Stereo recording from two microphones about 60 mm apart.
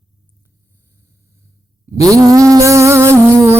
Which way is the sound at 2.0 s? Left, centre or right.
Right.